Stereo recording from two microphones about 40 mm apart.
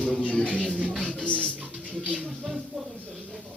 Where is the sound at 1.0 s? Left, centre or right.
Left.